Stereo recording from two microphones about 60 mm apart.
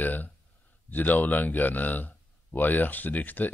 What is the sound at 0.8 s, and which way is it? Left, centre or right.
A man's voice, left.